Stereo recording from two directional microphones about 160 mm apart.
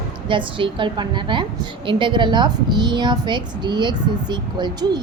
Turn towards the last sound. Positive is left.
turn(degrees=-25)  # may be behind; listen again after turning